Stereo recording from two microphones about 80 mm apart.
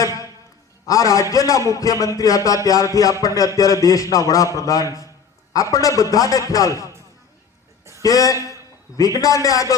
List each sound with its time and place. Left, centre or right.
0.0 s a sound: left
0.9 s a man's voice: left
8.0 s a man's voice: left